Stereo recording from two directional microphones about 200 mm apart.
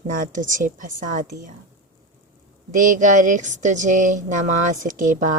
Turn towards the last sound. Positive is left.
turn(degrees=-40)  # may be behind; listen again after turning